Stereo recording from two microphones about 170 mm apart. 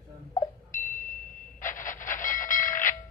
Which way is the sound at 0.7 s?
50° left (ahead or behind).